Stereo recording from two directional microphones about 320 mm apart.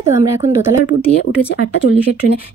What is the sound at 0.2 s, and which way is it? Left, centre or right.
Speech, centre.